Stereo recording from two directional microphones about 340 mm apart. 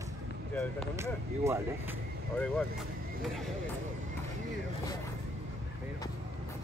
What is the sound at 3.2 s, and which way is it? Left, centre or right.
Speech, centre.